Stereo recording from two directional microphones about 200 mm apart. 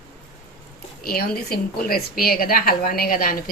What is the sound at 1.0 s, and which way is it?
A woman's voice, 50° left (ahead or behind).